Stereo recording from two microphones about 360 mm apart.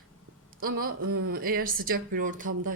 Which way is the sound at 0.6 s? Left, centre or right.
Right.